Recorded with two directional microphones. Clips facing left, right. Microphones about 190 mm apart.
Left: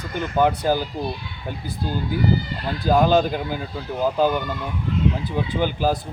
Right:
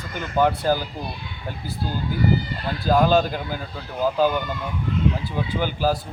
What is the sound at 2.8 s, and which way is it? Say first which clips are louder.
Speech: left 1 dB; 15° left (ahead or behind).